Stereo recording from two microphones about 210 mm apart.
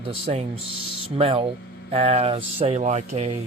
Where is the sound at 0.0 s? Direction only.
25° right (ahead or behind).